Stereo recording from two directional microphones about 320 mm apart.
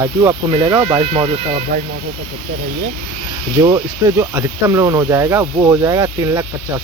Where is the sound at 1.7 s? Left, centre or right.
Right.